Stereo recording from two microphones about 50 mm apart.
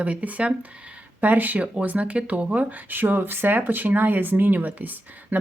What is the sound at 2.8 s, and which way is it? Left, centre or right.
Speech, right.